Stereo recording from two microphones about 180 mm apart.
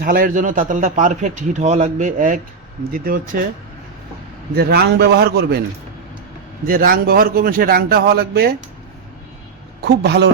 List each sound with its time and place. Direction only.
0.0 s a man's voice: 50° right (ahead or behind)
4.5 s a man's voice: 60° right (ahead or behind)
6.7 s a man's voice: 50° right (ahead or behind)
9.8 s a man's voice: 70° right (ahead or behind)